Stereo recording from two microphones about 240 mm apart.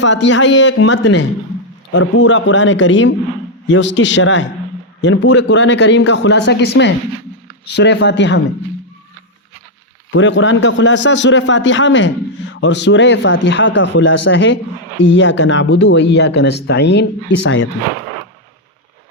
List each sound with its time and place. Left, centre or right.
0.0 s speech: left
10.1 s speech: left
13.7 s speech: left
14.3 s speech: left